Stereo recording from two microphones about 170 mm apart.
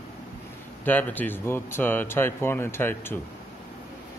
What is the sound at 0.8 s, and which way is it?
Speech, 10° left (ahead or behind).